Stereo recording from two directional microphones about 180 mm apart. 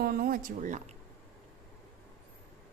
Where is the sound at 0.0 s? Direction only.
55° right (ahead or behind).